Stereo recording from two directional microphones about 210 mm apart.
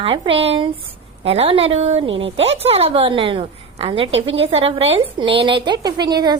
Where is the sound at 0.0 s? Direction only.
25° right (ahead or behind).